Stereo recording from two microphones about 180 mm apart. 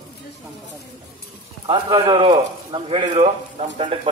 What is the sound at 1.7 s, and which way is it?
A man's voice, 25° right (ahead or behind).